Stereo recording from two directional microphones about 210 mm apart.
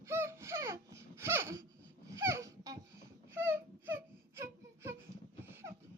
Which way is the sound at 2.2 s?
15° right (ahead or behind).